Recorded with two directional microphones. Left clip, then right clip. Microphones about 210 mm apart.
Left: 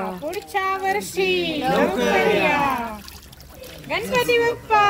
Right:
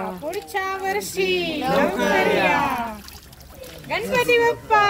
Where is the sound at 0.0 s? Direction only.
40° left (ahead or behind).